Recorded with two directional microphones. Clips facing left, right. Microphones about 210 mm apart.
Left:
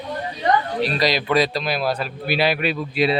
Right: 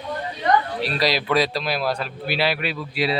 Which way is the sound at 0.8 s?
5° right (ahead or behind).